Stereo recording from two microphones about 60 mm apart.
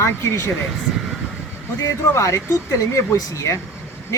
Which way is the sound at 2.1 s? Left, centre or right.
Left.